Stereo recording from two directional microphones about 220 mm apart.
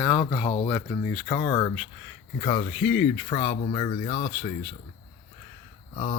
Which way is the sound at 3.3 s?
25° left (ahead or behind).